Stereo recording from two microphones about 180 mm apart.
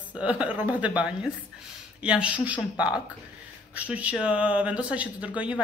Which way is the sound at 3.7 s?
5° right (ahead or behind).